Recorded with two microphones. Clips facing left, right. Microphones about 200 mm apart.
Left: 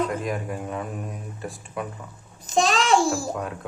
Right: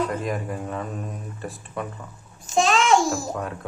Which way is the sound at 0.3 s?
5° left (ahead or behind).